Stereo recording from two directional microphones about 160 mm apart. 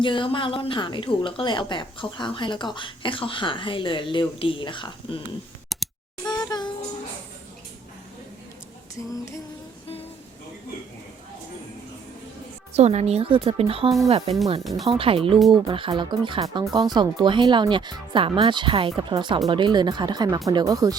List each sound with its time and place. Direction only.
0.0 s speech: 30° left (ahead or behind)
5.7 s a sound: centre (ahead or behind)
6.2 s a sound: 25° left (ahead or behind)
12.7 s a woman's voice: 45° right (ahead or behind)
14.6 s speech: centre (ahead or behind)
14.8 s a woman's voice: 35° right (ahead or behind)